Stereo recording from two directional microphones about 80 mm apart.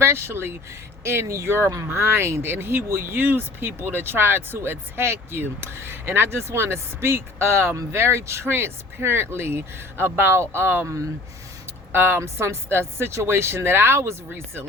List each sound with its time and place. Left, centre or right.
0.0 s speech: right